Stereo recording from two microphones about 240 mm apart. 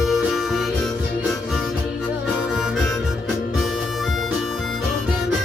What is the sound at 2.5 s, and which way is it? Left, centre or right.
Harmonica, centre.